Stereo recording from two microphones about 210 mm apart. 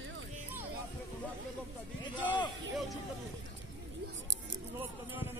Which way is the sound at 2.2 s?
20° left (ahead or behind).